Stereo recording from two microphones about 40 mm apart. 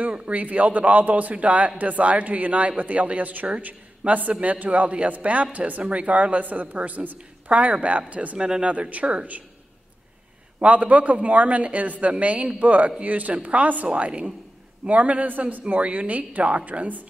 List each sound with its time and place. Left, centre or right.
0.1 s a woman's voice: right
8.4 s speech: right
10.6 s speech: right